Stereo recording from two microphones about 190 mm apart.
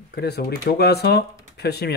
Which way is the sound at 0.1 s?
60° left (ahead or behind).